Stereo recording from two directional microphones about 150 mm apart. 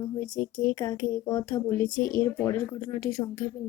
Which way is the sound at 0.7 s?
20° left (ahead or behind).